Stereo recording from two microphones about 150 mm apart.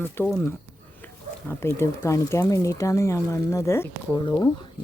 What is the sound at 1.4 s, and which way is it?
Speech, 15° left (ahead or behind).